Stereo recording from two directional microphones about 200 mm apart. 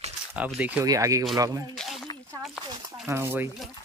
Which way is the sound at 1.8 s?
Centre (ahead or behind).